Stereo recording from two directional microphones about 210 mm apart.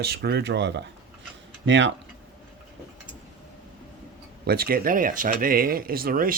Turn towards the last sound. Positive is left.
turn(degrees=-40)  # may be behind; listen again after turning